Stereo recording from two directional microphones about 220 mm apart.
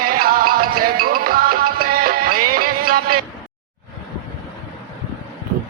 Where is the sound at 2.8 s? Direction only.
40° right (ahead or behind).